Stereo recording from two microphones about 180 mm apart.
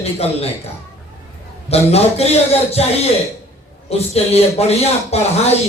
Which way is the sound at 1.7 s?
35° left (ahead or behind).